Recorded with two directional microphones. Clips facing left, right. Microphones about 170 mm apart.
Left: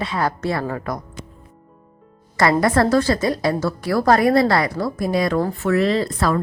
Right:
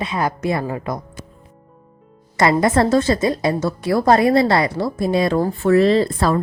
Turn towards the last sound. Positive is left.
turn(degrees=-30)  # may be behind; listen again after turning